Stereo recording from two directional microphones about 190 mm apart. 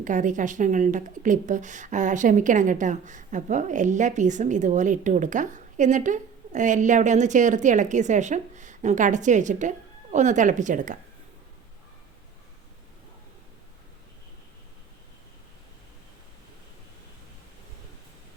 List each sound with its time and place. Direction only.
0.0 s speech: 40° right (ahead or behind)